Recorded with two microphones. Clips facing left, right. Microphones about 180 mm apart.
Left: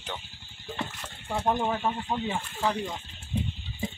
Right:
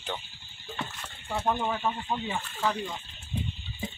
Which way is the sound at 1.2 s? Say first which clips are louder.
Left 2 dB; 15° left (ahead or behind).